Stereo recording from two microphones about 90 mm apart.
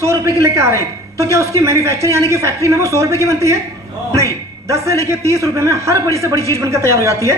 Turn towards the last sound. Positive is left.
turn(degrees=-35)  # may be behind; listen again after turning